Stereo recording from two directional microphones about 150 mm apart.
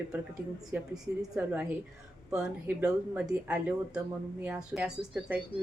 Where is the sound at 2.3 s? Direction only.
5° right (ahead or behind).